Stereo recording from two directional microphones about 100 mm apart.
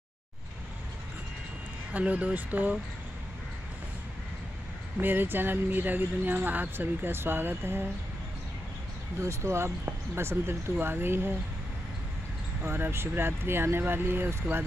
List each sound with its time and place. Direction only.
1.9 s speech: 15° right (ahead or behind)
4.9 s speech: 20° right (ahead or behind)
9.2 s speech: 30° right (ahead or behind)
12.6 s speech: 20° right (ahead or behind)